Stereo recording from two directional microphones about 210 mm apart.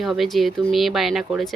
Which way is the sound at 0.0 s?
Centre (ahead or behind).